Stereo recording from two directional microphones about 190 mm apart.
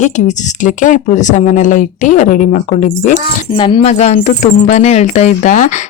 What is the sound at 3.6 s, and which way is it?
Speech, 30° left (ahead or behind).